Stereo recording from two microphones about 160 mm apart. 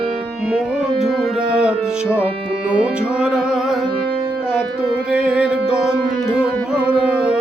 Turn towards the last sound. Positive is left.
turn(degrees=-5)  # may be behind; listen again after turning